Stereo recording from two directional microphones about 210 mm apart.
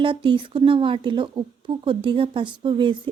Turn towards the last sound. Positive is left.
turn(degrees=-25)  # may be behind; listen again after turning